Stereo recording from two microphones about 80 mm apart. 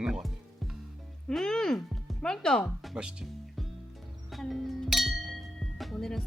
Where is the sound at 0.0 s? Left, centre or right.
Centre.